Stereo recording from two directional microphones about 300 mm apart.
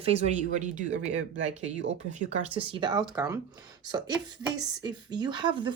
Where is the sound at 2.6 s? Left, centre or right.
Centre.